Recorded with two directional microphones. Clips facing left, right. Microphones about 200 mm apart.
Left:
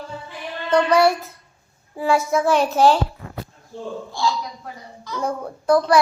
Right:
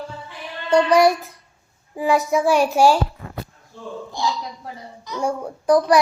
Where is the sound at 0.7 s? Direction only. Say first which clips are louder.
Right 1 dB; 15° right (ahead or behind).